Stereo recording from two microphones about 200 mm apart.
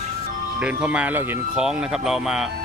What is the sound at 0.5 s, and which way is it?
Speech, 5° right (ahead or behind).